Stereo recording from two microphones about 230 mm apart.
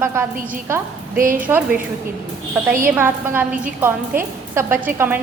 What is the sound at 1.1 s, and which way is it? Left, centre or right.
Speech, right.